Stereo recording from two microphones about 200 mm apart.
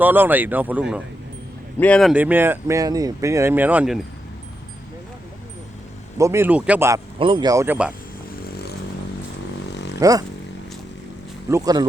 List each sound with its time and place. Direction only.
0.0 s speech: 10° right (ahead or behind)
1.8 s speech: 5° left (ahead or behind)
6.1 s speech: 15° right (ahead or behind)
7.2 s speech: 25° right (ahead or behind); by 7.9 s 5° right (ahead or behind)
8.4 s a sound: 50° left (ahead or behind)
9.6 s vehicle: 60° left (ahead or behind)
10.0 s speech: 15° right (ahead or behind)
11.4 s speech: 15° right (ahead or behind)